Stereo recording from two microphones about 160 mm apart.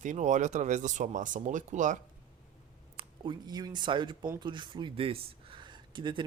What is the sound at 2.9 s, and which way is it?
Speech, 30° right (ahead or behind).